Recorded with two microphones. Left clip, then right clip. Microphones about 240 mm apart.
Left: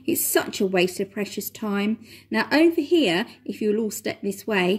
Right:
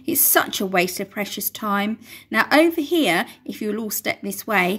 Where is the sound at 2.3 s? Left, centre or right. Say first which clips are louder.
Right 3 dB; right.